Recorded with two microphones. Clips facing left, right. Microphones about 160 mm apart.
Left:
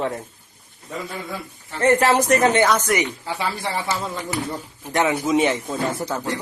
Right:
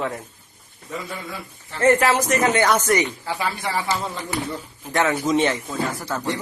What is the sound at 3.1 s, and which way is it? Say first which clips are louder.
Speech: even; 20° left (ahead or behind).